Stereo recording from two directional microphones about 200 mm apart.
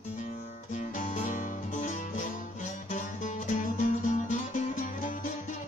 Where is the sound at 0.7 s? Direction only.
40° left (ahead or behind).